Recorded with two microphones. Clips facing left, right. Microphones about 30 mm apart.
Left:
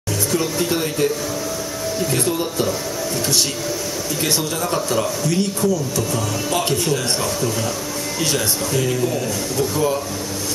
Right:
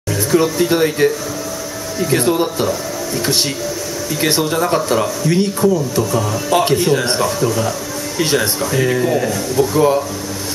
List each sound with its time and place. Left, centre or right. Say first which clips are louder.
0.3 s speech: right 7 dB; centre
2.1 s speech: right 9 dB; right
4.2 s speech: right 7 dB; right
8.9 s speech: right 5 dB; right